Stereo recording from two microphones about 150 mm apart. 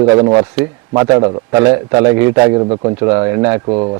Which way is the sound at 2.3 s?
30° right (ahead or behind).